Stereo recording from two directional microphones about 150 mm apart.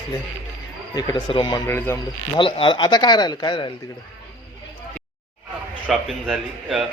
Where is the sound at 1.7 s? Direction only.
15° left (ahead or behind).